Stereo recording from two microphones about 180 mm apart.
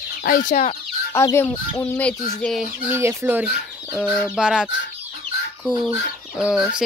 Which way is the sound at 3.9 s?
5° right (ahead or behind).